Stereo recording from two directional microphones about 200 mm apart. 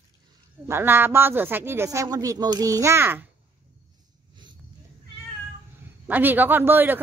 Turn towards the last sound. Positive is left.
turn(degrees=-10)  # may be behind; listen again after turning